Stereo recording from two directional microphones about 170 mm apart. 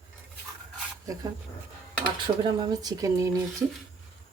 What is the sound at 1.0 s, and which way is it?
Speech, 20° right (ahead or behind).